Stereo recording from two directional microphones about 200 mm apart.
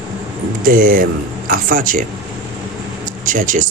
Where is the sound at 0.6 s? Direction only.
45° right (ahead or behind).